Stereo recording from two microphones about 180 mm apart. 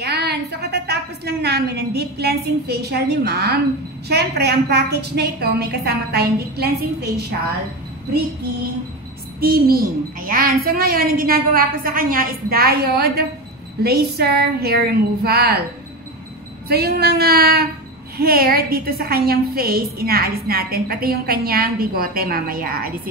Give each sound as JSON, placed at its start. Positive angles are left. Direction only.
{"t": 0.0, "sound": "a woman's voice", "side_deg": -65}
{"t": 9.4, "sound": "a woman's voice", "side_deg": -55}
{"t": 16.6, "sound": "a woman's voice", "side_deg": -60}